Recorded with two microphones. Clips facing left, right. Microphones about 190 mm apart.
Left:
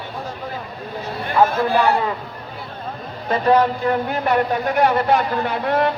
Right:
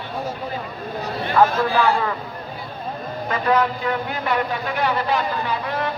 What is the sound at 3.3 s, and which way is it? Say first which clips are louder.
A man's voice: left 4 dB; 35° left (ahead or behind).